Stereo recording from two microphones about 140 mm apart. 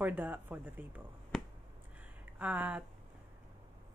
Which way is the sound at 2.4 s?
10° right (ahead or behind).